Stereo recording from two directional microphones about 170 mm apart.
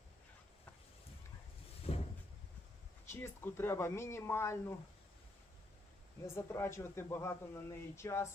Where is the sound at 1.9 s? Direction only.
35° left (ahead or behind).